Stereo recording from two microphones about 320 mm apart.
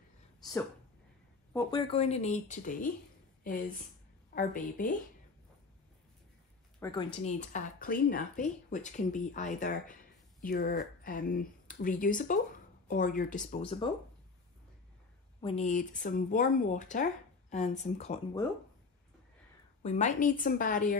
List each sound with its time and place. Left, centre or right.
1.5 s speech: centre
4.4 s speech: left
6.8 s speech: centre
15.4 s speech: centre
19.8 s speech: left